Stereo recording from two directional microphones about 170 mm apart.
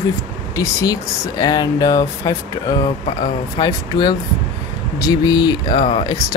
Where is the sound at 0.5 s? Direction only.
20° left (ahead or behind).